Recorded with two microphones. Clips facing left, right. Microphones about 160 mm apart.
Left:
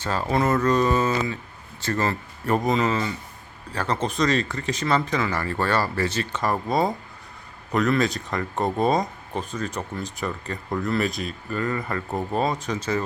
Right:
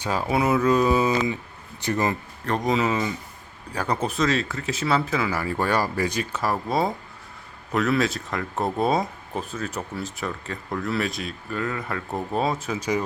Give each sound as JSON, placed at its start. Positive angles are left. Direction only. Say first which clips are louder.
{"t": 0.0, "sound": "speech", "louder": "even", "side_deg": -10}
{"t": 2.5, "sound": "speech", "louder": "left 1 dB", "side_deg": 0}